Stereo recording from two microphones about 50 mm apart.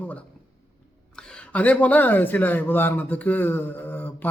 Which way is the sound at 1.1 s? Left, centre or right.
Left.